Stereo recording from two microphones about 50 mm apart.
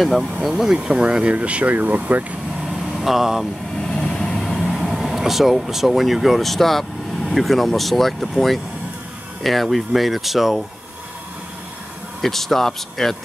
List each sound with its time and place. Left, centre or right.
0.0 s speech: centre
1.3 s speech: right
3.0 s speech: centre
3.8 s vehicle: centre
4.6 s speech: centre
12.2 s speech: centre